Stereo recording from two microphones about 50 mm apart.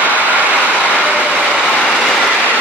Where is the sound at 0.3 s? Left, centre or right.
Right.